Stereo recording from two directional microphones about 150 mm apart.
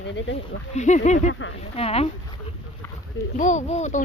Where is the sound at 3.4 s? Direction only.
55° left (ahead or behind).